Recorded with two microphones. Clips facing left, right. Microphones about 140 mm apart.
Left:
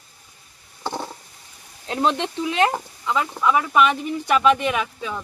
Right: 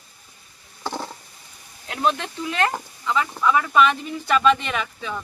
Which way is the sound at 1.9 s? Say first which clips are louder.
Left 2 dB; 25° left (ahead or behind).